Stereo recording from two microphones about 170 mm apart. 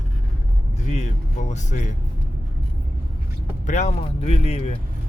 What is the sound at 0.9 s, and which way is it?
Speech, 45° left (ahead or behind).